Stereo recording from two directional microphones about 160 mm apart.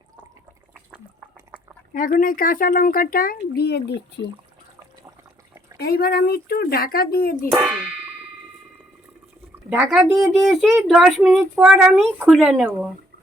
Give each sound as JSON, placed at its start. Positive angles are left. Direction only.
{"t": 1.9, "sound": "speech", "side_deg": 60}
{"t": 5.7, "sound": "speech", "side_deg": 80}
{"t": 7.6, "sound": "speech", "side_deg": -5}
{"t": 9.6, "sound": "speech", "side_deg": -5}